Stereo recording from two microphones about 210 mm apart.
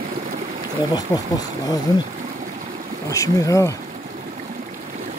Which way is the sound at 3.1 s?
15° left (ahead or behind).